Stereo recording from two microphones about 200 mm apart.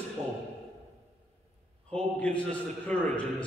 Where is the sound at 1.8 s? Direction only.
5° left (ahead or behind).